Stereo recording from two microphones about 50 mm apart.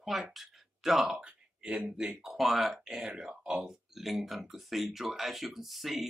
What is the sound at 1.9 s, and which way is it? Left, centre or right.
Speech, centre.